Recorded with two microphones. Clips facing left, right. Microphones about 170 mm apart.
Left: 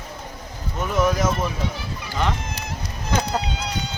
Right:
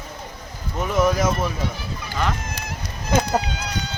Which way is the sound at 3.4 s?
30° left (ahead or behind).